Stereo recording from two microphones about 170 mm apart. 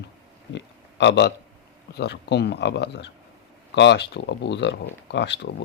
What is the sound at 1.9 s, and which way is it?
Speech, 80° left.